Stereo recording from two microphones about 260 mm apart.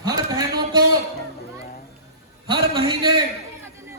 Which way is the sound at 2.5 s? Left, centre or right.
Centre.